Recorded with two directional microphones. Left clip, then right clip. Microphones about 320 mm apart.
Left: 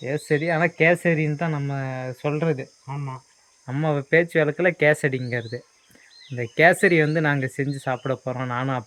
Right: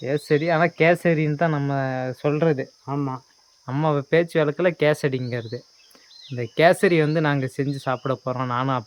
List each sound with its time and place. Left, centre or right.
0.4 s speech: centre